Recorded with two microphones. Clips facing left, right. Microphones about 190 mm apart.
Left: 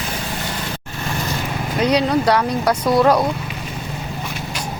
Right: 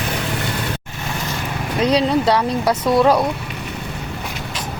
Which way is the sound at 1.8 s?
30° right (ahead or behind).